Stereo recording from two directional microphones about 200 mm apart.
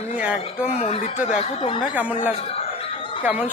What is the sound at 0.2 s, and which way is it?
Speech, 5° right (ahead or behind).